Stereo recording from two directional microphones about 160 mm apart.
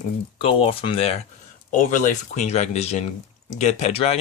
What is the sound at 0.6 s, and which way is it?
Speech, 35° left (ahead or behind).